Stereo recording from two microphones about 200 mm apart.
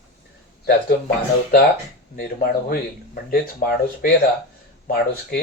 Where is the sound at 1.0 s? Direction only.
45° left (ahead or behind).